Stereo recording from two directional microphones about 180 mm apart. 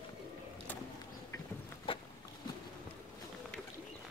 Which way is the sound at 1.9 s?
30° left (ahead or behind).